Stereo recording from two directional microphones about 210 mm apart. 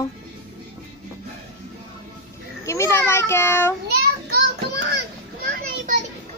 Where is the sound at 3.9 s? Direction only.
50° right (ahead or behind).